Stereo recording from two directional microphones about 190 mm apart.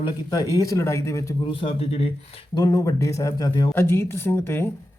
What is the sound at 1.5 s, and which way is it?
Speech, 30° left (ahead or behind).